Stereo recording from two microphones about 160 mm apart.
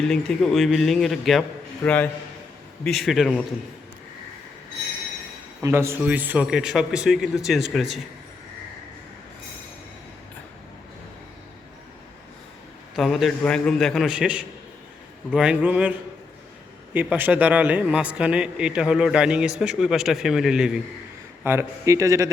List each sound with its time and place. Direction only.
0.1 s a man's voice: centre (ahead or behind)
5.6 s a man's voice: 15° right (ahead or behind)
13.0 s a man's voice: centre (ahead or behind)
21.4 s speech: 15° right (ahead or behind)